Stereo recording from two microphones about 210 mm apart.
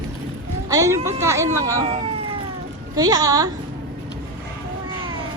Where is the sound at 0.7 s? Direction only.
15° right (ahead or behind).